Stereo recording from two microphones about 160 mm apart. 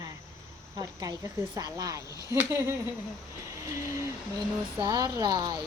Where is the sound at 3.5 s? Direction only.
20° right (ahead or behind).